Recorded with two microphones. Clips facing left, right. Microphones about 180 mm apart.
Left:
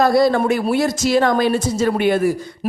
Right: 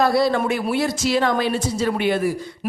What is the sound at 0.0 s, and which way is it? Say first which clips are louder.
A woman's voice: left 4 dB; 45° left (ahead or behind).